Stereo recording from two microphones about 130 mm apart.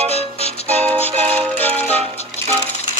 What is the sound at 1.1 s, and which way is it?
Music, 45° right (ahead or behind).